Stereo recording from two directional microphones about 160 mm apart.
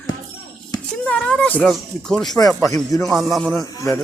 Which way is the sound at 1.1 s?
5° left (ahead or behind).